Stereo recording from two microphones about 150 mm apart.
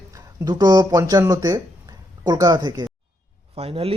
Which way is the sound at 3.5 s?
40° right (ahead or behind).